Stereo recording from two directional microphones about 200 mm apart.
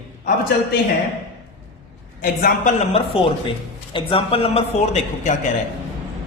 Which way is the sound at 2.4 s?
35° left (ahead or behind).